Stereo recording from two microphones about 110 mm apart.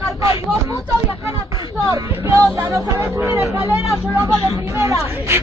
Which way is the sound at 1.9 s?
30° right (ahead or behind).